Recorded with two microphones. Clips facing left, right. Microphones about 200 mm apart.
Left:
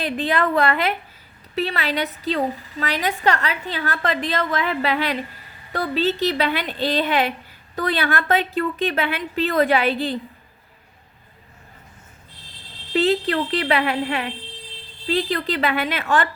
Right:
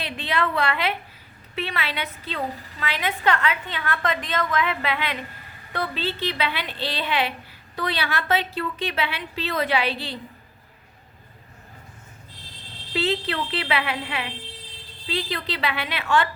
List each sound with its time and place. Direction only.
0.0 s a woman's voice: 45° left (ahead or behind)
12.9 s a woman's voice: 45° left (ahead or behind)